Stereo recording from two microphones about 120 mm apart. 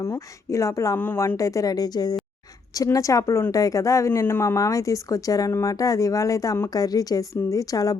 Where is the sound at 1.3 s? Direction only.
25° left (ahead or behind).